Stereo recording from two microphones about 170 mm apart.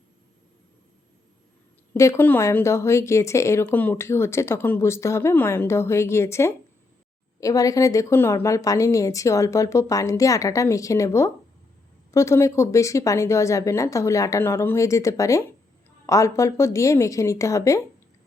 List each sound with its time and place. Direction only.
1.9 s a woman's voice: 15° left (ahead or behind)